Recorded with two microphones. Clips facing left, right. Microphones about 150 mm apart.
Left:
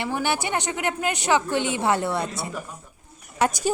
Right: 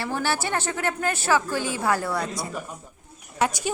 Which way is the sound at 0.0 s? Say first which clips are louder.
Left 1 dB; 15° left (ahead or behind).